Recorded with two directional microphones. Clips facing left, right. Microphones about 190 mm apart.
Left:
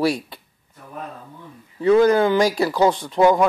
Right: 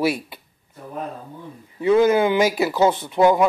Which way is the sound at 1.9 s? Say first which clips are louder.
Left 1 dB; 10° right (ahead or behind).